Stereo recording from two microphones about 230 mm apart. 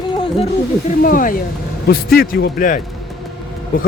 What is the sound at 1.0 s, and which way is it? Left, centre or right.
Speech, left.